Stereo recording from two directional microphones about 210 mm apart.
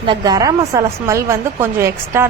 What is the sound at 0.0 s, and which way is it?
Speech, 20° right (ahead or behind).